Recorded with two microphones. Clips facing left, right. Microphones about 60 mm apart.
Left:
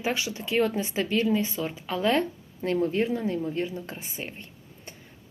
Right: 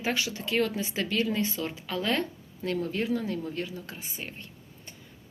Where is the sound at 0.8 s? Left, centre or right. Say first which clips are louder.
Left 4 dB; left.